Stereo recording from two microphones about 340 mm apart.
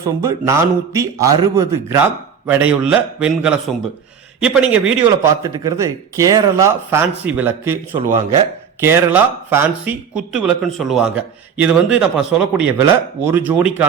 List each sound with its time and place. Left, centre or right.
0.0 s a man's voice: centre
8.0 s speech: right
8.8 s a man's voice: centre